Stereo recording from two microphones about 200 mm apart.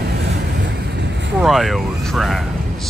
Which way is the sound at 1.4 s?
Centre (ahead or behind).